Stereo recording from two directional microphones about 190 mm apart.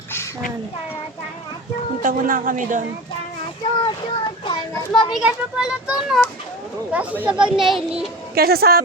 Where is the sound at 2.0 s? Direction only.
45° right (ahead or behind).